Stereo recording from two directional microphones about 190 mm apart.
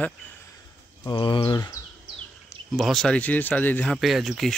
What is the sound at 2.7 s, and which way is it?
Speech, centre (ahead or behind).